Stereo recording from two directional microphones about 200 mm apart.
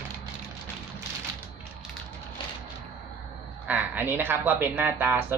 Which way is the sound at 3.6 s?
10° right (ahead or behind).